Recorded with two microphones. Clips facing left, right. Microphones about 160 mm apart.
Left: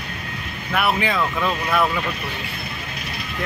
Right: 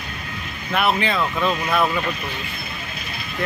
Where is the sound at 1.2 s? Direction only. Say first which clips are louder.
Right 1 dB; 15° right (ahead or behind).